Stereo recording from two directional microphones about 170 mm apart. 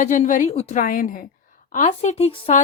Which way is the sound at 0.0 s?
50° left (ahead or behind).